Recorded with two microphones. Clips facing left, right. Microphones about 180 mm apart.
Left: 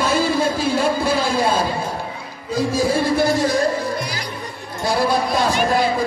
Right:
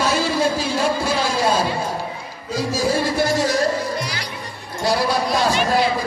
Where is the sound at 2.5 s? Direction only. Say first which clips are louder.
Left 2 dB; 55° left (ahead or behind).